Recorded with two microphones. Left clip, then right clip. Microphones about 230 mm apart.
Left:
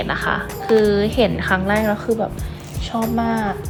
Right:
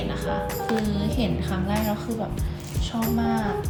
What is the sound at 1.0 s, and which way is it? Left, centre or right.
Speech, centre.